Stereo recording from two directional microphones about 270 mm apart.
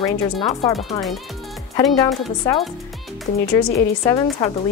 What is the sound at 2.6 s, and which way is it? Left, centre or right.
Speech, centre.